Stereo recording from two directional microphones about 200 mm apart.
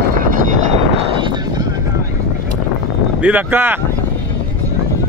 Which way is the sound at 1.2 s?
20° right (ahead or behind).